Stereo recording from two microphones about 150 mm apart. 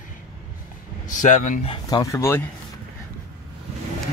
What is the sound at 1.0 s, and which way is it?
Speech, 55° left (ahead or behind).